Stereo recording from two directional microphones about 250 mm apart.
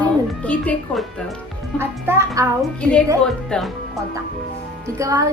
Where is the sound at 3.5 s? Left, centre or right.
Centre.